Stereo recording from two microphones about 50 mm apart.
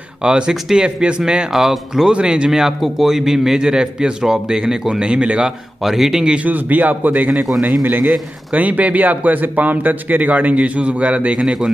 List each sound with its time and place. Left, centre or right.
0.2 s a man's voice: centre
1.5 s speech: centre
2.1 s a man's voice: centre
5.8 s speech: centre
6.4 s speech: right
11.4 s a man's voice: centre